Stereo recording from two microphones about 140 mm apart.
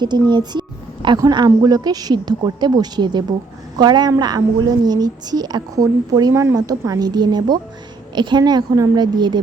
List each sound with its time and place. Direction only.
0.0 s a woman's voice: 30° right (ahead or behind)